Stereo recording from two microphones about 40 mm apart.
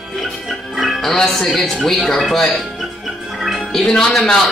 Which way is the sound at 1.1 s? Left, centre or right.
Centre.